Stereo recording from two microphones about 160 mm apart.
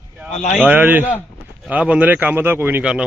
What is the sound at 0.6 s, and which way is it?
A man's voice, 10° right (ahead or behind).